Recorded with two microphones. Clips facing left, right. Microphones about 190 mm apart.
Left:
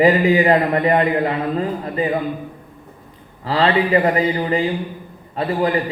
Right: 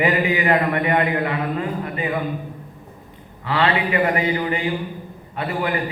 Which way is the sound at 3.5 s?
35° left (ahead or behind).